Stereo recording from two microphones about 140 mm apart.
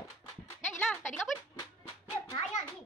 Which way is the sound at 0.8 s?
10° left (ahead or behind).